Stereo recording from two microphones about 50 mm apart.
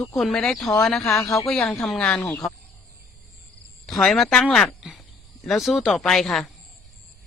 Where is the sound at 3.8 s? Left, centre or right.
Centre.